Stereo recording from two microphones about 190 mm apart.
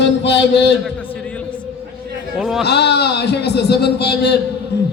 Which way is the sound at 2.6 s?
60° left (ahead or behind).